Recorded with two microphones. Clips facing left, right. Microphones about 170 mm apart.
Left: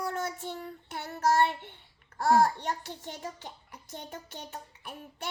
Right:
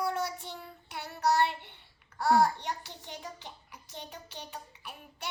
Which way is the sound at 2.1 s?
50° left (ahead or behind).